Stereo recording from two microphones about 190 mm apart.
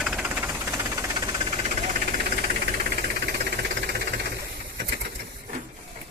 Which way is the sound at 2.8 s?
55° right (ahead or behind).